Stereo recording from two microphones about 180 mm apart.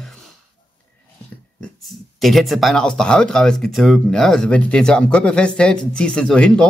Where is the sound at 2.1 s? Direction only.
Centre (ahead or behind).